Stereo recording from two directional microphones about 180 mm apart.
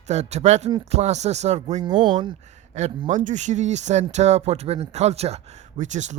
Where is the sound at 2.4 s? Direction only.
40° right (ahead or behind).